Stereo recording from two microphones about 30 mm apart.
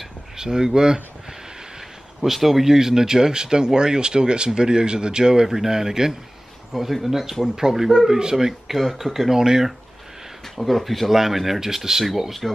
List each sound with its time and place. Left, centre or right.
0.4 s speech: right
2.2 s speech: centre
2.7 s speech: centre
8.2 s speech: right
8.5 s speech: centre
10.6 s speech: centre